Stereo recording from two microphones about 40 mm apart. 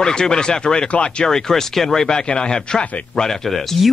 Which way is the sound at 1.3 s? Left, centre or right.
Centre.